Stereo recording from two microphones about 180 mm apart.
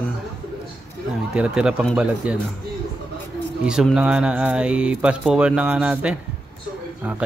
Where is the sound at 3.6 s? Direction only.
5° right (ahead or behind).